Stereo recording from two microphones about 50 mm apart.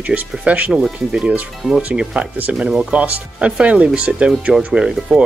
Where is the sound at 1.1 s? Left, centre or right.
Centre.